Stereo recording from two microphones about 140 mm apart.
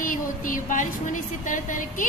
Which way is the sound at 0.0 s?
75° left (ahead or behind).